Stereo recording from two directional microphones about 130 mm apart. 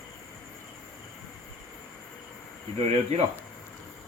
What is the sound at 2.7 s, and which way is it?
Speech, 50° right (ahead or behind).